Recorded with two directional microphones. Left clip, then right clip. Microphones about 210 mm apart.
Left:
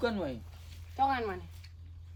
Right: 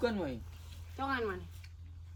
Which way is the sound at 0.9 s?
35° left (ahead or behind).